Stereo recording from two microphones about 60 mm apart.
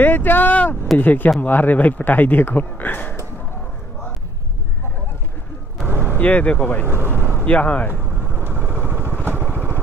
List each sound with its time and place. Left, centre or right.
0.0 s speech: left
5.9 s a sound: right
6.1 s speech: left
6.9 s vehicle: right
7.4 s speech: left
7.9 s vehicle: right